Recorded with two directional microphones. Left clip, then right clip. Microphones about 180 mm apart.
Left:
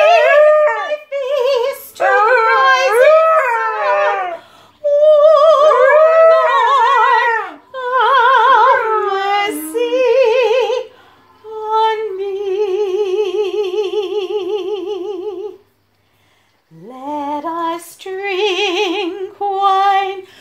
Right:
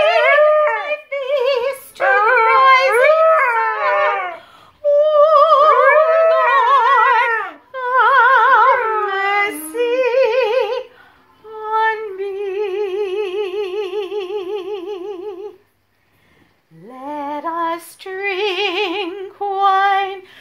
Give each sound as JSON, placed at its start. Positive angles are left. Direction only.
{"t": 0.2, "sound": "howl", "side_deg": 5}
{"t": 0.8, "sound": "a sound", "side_deg": -25}
{"t": 2.0, "sound": "female singing", "side_deg": 5}
{"t": 2.5, "sound": "a sound", "side_deg": -25}
{"t": 2.9, "sound": "dog", "side_deg": 5}
{"t": 4.8, "sound": "humming", "side_deg": -20}
{"t": 6.5, "sound": "a sound", "side_deg": -20}
{"t": 9.7, "sound": "music", "side_deg": -15}
{"t": 17.0, "sound": "female singing", "side_deg": -10}